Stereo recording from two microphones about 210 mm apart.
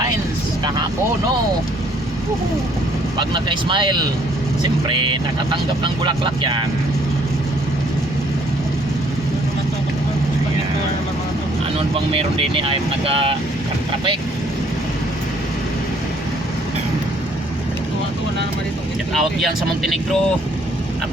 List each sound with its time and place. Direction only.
3.2 s speech: 20° right (ahead or behind)
11.9 s speech: 25° right (ahead or behind)
19.1 s speech: centre (ahead or behind)